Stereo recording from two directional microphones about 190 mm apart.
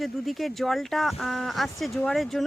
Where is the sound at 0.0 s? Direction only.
Centre (ahead or behind).